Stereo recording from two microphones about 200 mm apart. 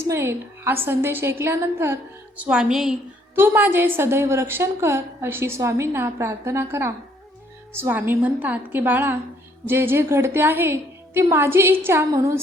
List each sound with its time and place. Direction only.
0.0 s a woman's voice: 15° right (ahead or behind)